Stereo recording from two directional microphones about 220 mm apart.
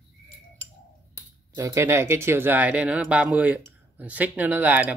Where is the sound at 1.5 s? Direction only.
15° right (ahead or behind).